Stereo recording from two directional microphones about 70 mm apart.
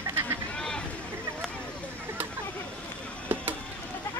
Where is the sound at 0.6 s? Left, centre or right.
Centre.